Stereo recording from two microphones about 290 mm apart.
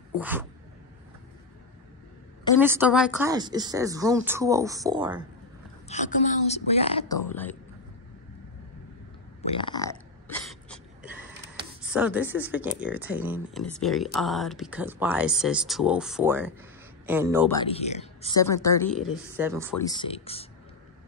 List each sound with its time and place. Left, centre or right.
0.2 s speech: centre
2.6 s speech: centre
5.9 s a woman's voice: left
7.2 s a woman's voice: centre
9.4 s burping: centre
11.9 s speech: centre
17.6 s a woman's voice: left
18.4 s a woman's voice: centre
18.9 s speech: centre
19.8 s a woman's voice: centre